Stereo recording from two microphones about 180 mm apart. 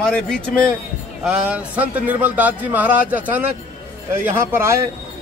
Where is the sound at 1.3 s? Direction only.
5° right (ahead or behind).